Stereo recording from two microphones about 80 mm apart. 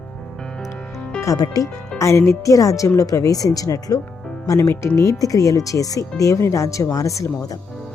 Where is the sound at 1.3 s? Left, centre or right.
Left.